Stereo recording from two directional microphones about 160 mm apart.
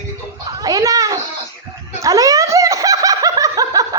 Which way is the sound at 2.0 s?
20° right (ahead or behind).